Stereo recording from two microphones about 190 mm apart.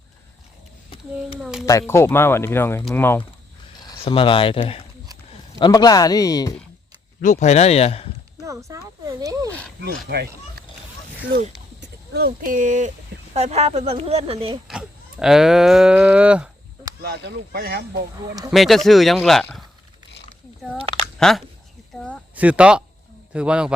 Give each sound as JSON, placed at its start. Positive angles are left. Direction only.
{"t": 1.4, "sound": "speech", "side_deg": -5}
{"t": 1.9, "sound": "speech", "side_deg": 10}
{"t": 3.8, "sound": "a man's voice", "side_deg": 25}
{"t": 7.2, "sound": "speech", "side_deg": 40}
{"t": 8.4, "sound": "speech", "side_deg": -15}
{"t": 9.5, "sound": "wild animals", "side_deg": 5}
{"t": 10.1, "sound": "speech", "side_deg": -55}
{"t": 11.8, "sound": "speech", "side_deg": -55}
{"t": 14.7, "sound": "cattle", "side_deg": -5}
{"t": 17.0, "sound": "speech", "side_deg": -60}
{"t": 18.5, "sound": "speech", "side_deg": 0}
{"t": 20.7, "sound": "speech", "side_deg": -30}
{"t": 21.2, "sound": "speech", "side_deg": 0}
{"t": 22.4, "sound": "speech", "side_deg": -5}